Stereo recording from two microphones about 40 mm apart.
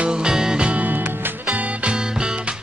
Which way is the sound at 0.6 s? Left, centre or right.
Right.